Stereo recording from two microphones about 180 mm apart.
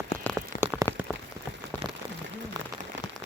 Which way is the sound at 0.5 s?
55° left (ahead or behind).